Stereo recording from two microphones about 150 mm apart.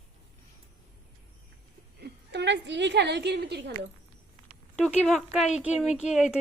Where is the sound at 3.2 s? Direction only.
90° right.